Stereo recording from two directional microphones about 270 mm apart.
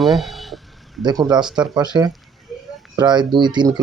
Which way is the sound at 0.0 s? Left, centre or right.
Centre.